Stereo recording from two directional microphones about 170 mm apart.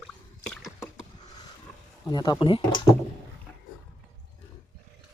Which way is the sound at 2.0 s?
25° left (ahead or behind).